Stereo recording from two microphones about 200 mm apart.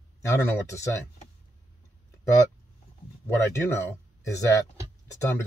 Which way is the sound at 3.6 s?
15° left (ahead or behind).